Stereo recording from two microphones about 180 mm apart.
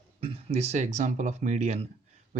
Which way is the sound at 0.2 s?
35° right (ahead or behind).